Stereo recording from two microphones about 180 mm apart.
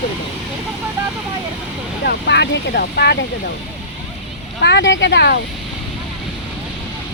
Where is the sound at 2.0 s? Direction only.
70° left (ahead or behind).